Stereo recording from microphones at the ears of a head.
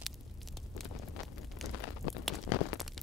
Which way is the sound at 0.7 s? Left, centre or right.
Left.